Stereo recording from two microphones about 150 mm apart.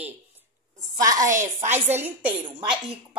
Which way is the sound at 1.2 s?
60° right (ahead or behind).